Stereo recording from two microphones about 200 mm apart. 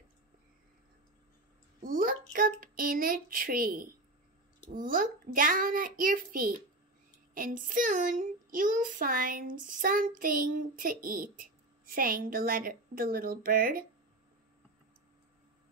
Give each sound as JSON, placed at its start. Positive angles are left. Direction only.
{"t": 1.8, "sound": "speech", "side_deg": -45}